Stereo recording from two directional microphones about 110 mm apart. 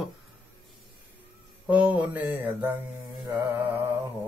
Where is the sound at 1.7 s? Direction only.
10° right (ahead or behind).